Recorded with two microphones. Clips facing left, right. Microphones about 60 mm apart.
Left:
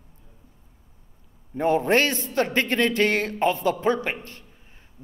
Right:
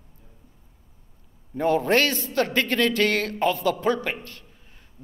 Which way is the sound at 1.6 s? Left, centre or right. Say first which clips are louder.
Even; centre.